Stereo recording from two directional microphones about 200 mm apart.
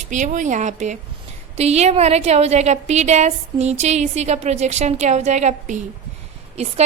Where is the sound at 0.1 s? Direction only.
40° right (ahead or behind).